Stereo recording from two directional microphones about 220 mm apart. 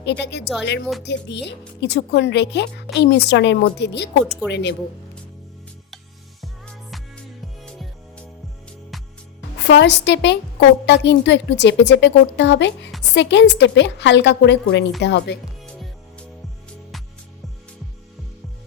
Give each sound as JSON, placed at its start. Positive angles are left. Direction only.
{"t": 0.0, "sound": "speech", "side_deg": 50}
{"t": 6.4, "sound": "music", "side_deg": 0}
{"t": 9.6, "sound": "speech", "side_deg": 50}
{"t": 15.6, "sound": "music", "side_deg": 5}